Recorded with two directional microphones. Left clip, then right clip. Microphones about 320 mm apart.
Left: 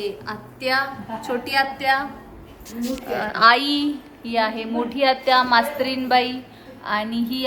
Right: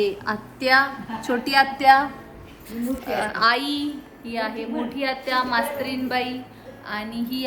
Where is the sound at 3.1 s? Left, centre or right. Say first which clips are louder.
Left 5 dB; centre.